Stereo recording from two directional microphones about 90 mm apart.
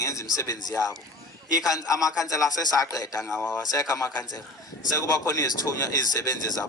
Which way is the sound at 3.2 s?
Centre (ahead or behind).